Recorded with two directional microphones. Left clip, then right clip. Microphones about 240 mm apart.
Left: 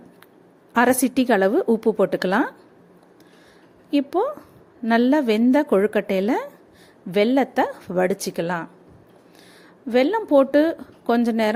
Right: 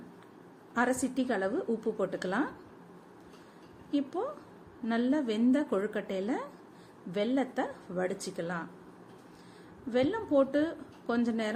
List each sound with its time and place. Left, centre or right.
0.7 s a woman's voice: left
3.9 s a woman's voice: left
9.9 s a woman's voice: left